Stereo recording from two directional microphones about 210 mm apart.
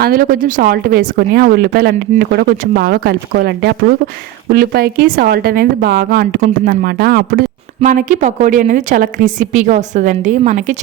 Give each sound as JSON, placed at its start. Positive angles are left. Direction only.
{"t": 0.0, "sound": "speech", "side_deg": -45}